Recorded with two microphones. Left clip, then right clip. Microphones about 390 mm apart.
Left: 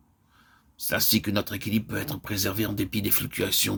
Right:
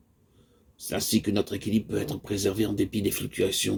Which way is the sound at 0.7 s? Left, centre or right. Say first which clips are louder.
Left 3 dB; left.